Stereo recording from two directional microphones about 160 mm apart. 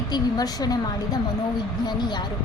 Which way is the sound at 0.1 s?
25° left (ahead or behind).